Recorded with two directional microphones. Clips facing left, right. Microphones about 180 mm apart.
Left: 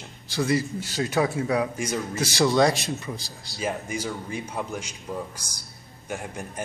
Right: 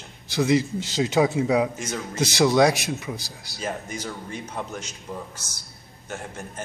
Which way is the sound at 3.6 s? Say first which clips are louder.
Left 2 dB; 10° left (ahead or behind).